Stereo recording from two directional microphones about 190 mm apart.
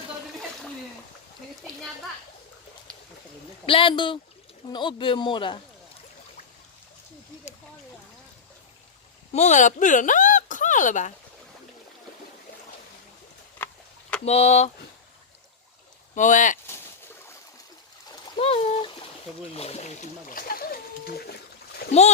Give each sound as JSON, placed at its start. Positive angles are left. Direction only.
{"t": 3.7, "sound": "speech", "side_deg": 25}
{"t": 9.3, "sound": "speech", "side_deg": 35}
{"t": 13.6, "sound": "a sound", "side_deg": 10}
{"t": 14.3, "sound": "speech", "side_deg": 35}
{"t": 16.1, "sound": "speech", "side_deg": 40}
{"t": 18.3, "sound": "a sound", "side_deg": 30}
{"t": 19.5, "sound": "speech", "side_deg": 35}